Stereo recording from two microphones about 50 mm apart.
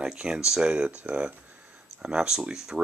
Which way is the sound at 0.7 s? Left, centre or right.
Right.